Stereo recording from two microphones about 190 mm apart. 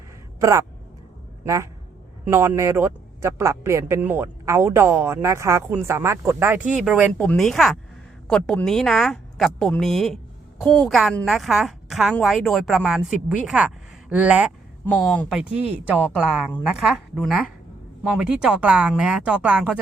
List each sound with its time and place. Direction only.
0.3 s speech: 20° right (ahead or behind)
7.2 s a woman's voice: 5° left (ahead or behind)
14.8 s a woman's voice: 5° left (ahead or behind)